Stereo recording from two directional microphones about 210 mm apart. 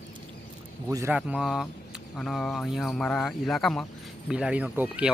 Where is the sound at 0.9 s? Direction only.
15° right (ahead or behind).